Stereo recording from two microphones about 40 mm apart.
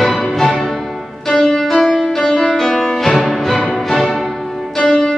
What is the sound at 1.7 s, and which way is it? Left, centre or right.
Music, centre.